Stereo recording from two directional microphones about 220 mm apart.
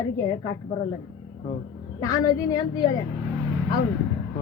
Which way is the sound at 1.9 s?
15° left (ahead or behind).